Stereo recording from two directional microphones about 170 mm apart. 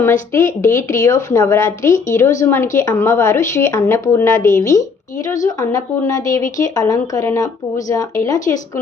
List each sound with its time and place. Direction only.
0.0 s speech: 15° left (ahead or behind)